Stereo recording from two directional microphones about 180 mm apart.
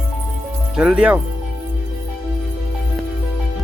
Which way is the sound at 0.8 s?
5° right (ahead or behind).